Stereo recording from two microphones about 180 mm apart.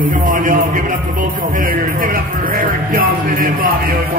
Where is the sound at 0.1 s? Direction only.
45° right (ahead or behind).